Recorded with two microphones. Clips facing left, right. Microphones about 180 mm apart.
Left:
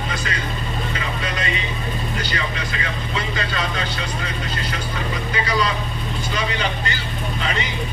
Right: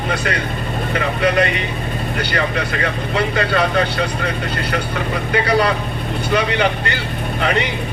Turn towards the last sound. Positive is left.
turn(degrees=-60)  # may be behind; listen again after turning